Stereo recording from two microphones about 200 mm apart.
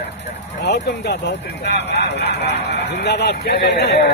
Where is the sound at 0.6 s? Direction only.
55° left (ahead or behind).